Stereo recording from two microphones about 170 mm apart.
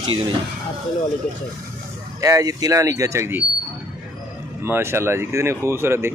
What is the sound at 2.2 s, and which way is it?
Speech, 20° right (ahead or behind).